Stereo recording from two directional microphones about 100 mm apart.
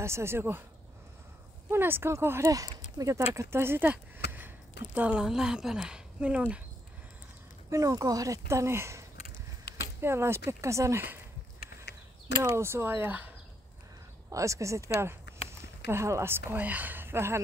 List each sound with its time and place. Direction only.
0.0 s speech: 25° right (ahead or behind)
1.7 s speech: 20° right (ahead or behind)
7.7 s speech: 35° right (ahead or behind)
12.4 s speech: 25° right (ahead or behind)
14.3 s speech: 30° right (ahead or behind)
15.9 s speech: 30° right (ahead or behind)